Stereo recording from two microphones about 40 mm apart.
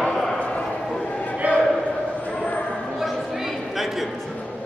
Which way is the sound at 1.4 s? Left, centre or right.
Right.